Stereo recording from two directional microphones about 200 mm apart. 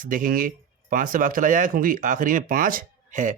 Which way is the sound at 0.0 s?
45° right (ahead or behind).